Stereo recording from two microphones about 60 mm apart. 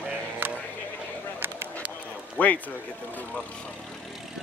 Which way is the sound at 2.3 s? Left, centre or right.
Left.